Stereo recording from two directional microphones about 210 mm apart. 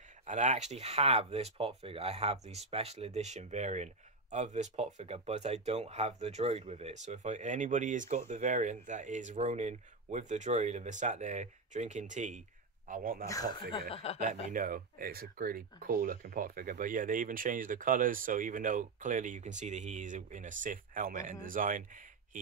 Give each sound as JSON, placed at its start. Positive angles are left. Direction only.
{"t": 0.3, "sound": "speech", "side_deg": -35}
{"t": 13.3, "sound": "speech", "side_deg": 20}
{"t": 14.2, "sound": "speech", "side_deg": -40}